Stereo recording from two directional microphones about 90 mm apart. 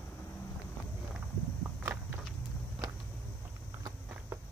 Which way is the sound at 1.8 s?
25° right (ahead or behind).